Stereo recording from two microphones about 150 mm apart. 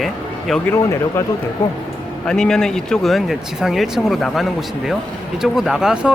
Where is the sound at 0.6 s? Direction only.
15° left (ahead or behind).